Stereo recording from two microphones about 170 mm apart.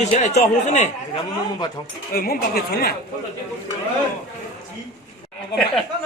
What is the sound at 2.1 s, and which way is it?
Speech, 60° left (ahead or behind).